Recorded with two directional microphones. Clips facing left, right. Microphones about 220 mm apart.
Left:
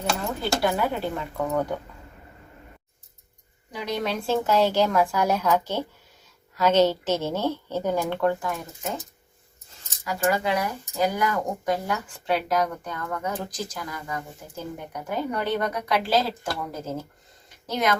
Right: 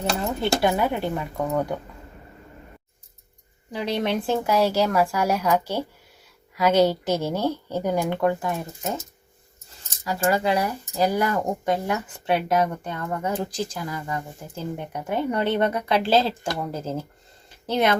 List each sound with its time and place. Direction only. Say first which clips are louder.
0.6 s speech: right 2 dB; 20° right (ahead or behind)
3.7 s speech: right 3 dB; 30° right (ahead or behind)
10.0 s speech: right 2 dB; 35° right (ahead or behind)